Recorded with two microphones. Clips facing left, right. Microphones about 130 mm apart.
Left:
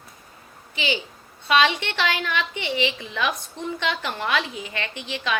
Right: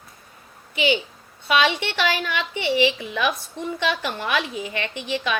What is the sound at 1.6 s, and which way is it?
A woman's voice, 15° right (ahead or behind).